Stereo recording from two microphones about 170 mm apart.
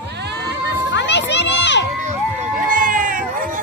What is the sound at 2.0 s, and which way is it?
Music, 50° right (ahead or behind).